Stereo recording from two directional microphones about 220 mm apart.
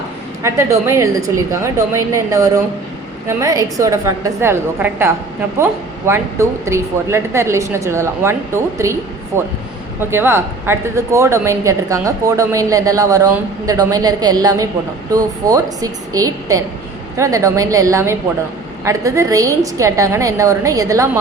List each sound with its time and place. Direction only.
0.4 s speech: 10° right (ahead or behind)